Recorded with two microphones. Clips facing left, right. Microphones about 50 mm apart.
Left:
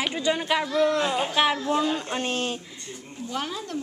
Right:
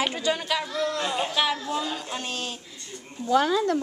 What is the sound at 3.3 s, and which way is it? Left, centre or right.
Speech, right.